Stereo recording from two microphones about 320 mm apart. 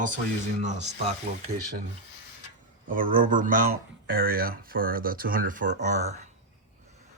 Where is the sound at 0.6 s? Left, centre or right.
Right.